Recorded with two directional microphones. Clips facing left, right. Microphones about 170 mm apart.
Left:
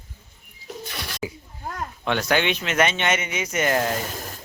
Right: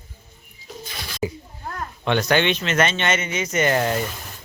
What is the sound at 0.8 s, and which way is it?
Pigeon, 70° left (ahead or behind).